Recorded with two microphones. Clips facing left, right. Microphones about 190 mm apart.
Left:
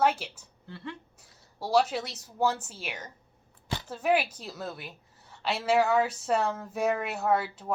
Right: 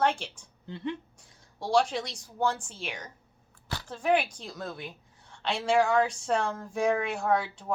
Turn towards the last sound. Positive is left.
turn(degrees=5)  # may be behind; listen again after turning